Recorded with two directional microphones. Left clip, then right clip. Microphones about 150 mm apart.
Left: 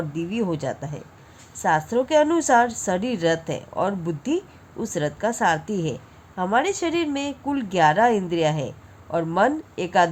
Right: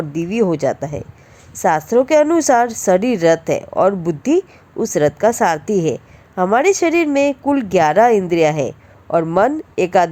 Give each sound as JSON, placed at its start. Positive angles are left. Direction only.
{"t": 0.1, "sound": "a woman's voice", "side_deg": -40}